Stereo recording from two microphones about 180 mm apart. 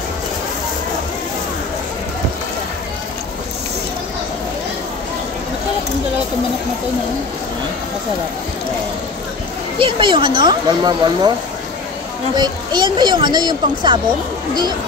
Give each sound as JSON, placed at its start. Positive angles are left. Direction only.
{"t": 9.8, "sound": "speech", "side_deg": -25}
{"t": 12.4, "sound": "speech", "side_deg": -25}